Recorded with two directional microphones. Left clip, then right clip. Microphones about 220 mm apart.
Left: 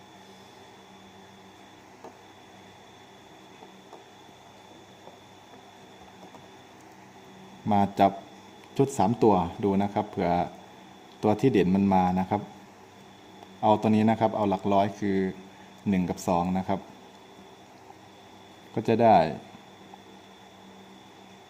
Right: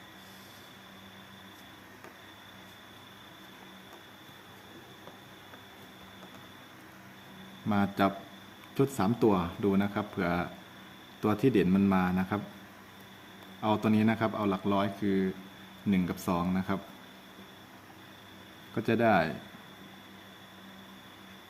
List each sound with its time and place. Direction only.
7.7 s speech: 20° left (ahead or behind)
13.6 s speech: 20° left (ahead or behind)
18.7 s speech: 20° left (ahead or behind)